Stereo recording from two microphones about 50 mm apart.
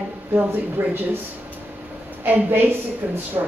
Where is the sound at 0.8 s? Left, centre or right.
Right.